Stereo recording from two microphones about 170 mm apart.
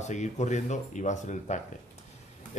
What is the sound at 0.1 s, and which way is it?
Speech, 45° left (ahead or behind).